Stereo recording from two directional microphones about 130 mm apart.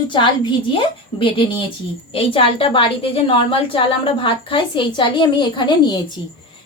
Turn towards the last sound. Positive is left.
turn(degrees=35)  # may be behind; listen again after turning